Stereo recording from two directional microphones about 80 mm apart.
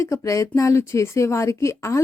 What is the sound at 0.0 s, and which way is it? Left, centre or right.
Speech, left.